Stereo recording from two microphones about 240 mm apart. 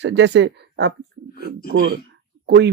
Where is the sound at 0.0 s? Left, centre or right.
Right.